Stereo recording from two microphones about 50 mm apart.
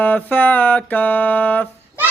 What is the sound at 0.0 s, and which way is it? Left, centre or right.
Music, left.